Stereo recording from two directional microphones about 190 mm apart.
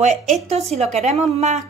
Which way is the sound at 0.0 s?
40° right (ahead or behind).